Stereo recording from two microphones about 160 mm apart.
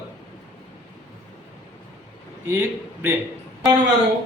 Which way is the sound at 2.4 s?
15° right (ahead or behind).